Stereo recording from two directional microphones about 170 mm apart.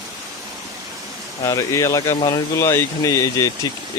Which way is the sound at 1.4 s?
20° left (ahead or behind).